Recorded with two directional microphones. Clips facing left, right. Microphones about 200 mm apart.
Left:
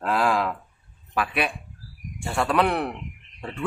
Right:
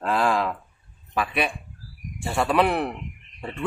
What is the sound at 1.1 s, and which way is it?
A man's voice, centre (ahead or behind).